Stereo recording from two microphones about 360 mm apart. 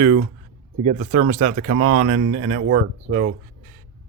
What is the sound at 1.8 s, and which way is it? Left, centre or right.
Speech, right.